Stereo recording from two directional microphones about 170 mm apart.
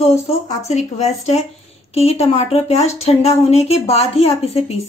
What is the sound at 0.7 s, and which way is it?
Speech, 40° left (ahead or behind).